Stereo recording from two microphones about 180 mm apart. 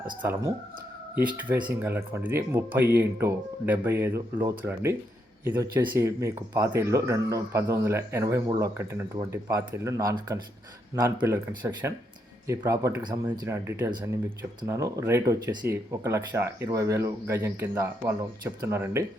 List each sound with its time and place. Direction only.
0.2 s speech: 15° right (ahead or behind)
1.6 s speech: 10° right (ahead or behind)